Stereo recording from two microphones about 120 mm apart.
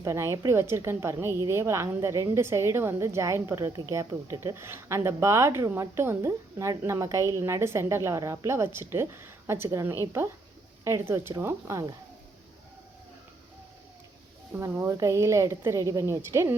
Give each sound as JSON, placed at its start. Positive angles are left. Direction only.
{"t": 0.0, "sound": "speech", "side_deg": -25}
{"t": 14.6, "sound": "speech", "side_deg": -25}